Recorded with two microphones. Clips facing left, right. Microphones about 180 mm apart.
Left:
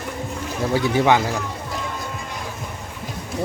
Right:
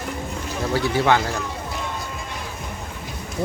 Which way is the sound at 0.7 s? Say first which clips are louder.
Left 2 dB; 15° left (ahead or behind).